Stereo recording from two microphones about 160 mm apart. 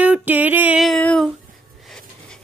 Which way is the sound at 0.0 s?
10° right (ahead or behind).